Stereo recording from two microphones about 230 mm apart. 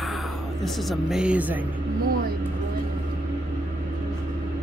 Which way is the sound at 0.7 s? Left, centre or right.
Centre.